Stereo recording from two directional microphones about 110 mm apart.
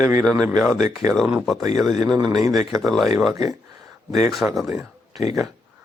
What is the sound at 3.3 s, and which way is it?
Speech, 30° right (ahead or behind).